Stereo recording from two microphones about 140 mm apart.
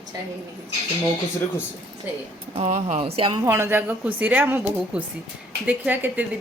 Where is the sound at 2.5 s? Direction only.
60° right (ahead or behind); by 3.4 s 40° right (ahead or behind).